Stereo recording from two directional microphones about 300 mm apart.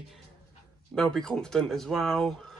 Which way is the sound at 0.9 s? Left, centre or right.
Centre.